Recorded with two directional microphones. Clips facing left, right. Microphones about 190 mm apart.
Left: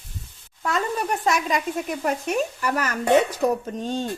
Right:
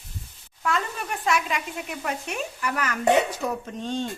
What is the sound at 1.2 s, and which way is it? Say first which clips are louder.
Speech: even; 40° left (ahead or behind).